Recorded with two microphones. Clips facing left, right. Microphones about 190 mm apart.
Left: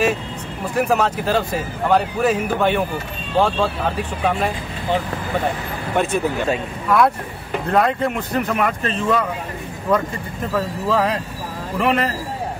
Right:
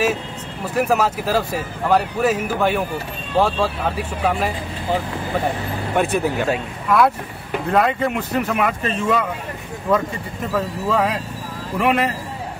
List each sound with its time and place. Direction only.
0.7 s speech: 5° right (ahead or behind)
5.9 s speech: 5° right (ahead or behind)